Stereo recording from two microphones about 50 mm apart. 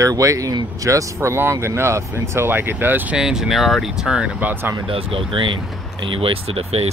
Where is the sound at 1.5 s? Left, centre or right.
Right.